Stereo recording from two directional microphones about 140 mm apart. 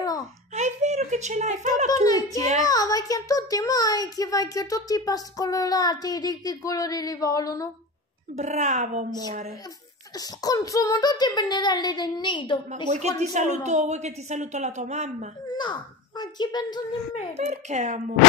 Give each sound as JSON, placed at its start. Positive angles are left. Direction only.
{"t": 0.6, "sound": "a sound", "side_deg": -55}
{"t": 2.0, "sound": "a child's voice", "side_deg": 25}
{"t": 8.4, "sound": "speech", "side_deg": -60}
{"t": 10.1, "sound": "a child's voice", "side_deg": 25}
{"t": 13.2, "sound": "speech", "side_deg": -55}
{"t": 15.5, "sound": "a child's voice", "side_deg": 35}
{"t": 17.3, "sound": "speech", "side_deg": -55}